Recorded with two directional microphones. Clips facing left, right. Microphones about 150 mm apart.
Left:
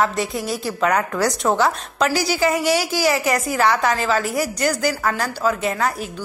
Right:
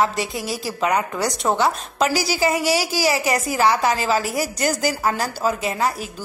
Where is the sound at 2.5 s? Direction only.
35° right (ahead or behind).